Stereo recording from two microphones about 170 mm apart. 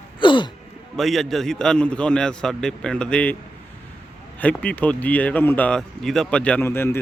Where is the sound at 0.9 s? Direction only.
Centre (ahead or behind).